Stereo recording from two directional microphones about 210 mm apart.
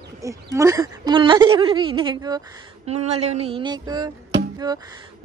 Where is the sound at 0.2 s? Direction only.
15° right (ahead or behind).